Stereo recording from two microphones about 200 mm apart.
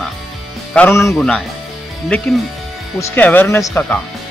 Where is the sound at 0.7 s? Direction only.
10° left (ahead or behind).